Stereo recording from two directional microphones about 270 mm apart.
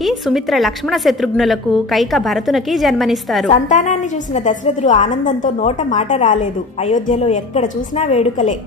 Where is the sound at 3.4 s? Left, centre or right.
Left.